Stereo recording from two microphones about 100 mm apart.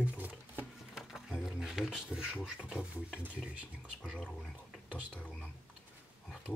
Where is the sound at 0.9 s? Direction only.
5° right (ahead or behind).